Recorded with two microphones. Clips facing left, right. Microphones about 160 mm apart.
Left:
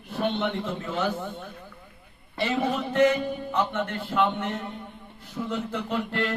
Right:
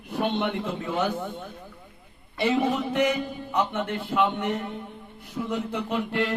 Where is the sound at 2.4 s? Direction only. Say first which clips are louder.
Right 3 dB; 10° right (ahead or behind).